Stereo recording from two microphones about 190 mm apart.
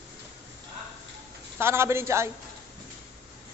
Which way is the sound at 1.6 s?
15° right (ahead or behind).